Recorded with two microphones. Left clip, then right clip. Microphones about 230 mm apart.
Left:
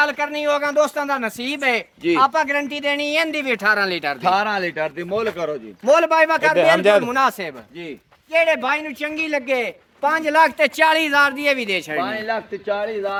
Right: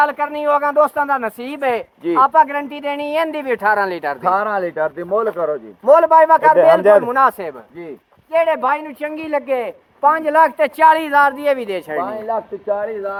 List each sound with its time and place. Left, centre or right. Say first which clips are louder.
0.0 s speech: right 3 dB; left
6.6 s a man's voice: right 4 dB; centre
7.1 s speech: right 4 dB; left